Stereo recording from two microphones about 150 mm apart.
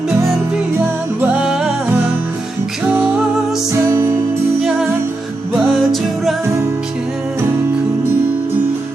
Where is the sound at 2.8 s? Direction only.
10° right (ahead or behind).